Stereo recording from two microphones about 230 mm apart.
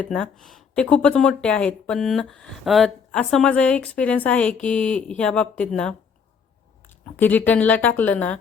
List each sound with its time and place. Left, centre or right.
0.0 s speech: centre
7.0 s speech: centre